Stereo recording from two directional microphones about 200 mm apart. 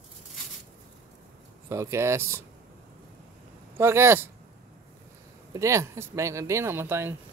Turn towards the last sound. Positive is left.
turn(degrees=-10)  # may be behind; listen again after turning